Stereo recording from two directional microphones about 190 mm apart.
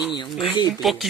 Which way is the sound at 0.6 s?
20° left (ahead or behind).